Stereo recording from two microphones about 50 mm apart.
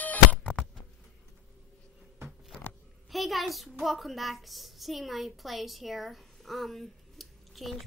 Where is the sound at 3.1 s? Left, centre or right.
Centre.